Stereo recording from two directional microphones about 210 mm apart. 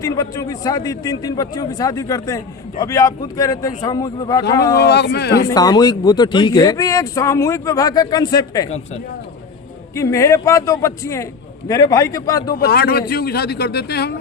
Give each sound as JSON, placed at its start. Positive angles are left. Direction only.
{"t": 0.0, "sound": "a man's voice", "side_deg": 15}
{"t": 4.8, "sound": "speech", "side_deg": 50}
{"t": 5.5, "sound": "a man's voice", "side_deg": 15}
{"t": 9.9, "sound": "a man's voice", "side_deg": 15}
{"t": 12.5, "sound": "speech", "side_deg": 45}